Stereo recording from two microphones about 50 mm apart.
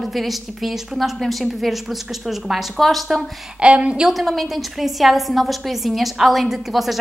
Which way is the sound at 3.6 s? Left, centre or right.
Right.